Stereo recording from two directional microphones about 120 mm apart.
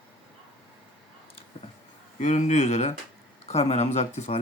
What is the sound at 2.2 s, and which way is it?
Speech, 80° left.